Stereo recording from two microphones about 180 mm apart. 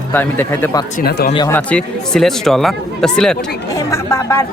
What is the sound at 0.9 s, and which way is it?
Speech, 60° left (ahead or behind).